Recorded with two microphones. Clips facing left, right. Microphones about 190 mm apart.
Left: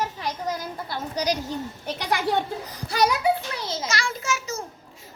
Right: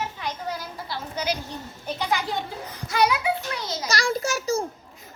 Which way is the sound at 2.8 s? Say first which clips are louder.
Even; 40° left (ahead or behind).